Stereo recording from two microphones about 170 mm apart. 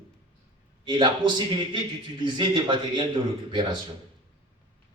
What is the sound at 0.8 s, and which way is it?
A man's voice, 25° right (ahead or behind).